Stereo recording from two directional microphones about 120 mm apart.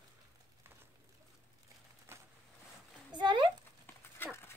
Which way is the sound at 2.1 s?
20° right (ahead or behind).